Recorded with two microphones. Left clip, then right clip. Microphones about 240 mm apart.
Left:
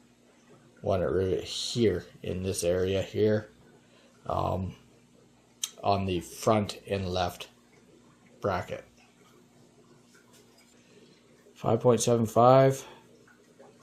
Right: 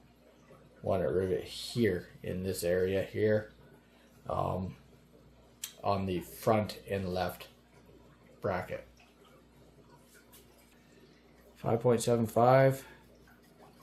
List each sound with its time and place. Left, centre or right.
0.9 s speech: left
5.8 s speech: left
11.5 s speech: left